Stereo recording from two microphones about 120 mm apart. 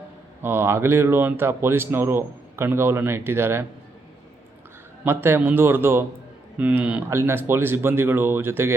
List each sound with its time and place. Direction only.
0.4 s speech: 20° right (ahead or behind)
5.0 s speech: 20° right (ahead or behind)
7.1 s speech: 20° right (ahead or behind)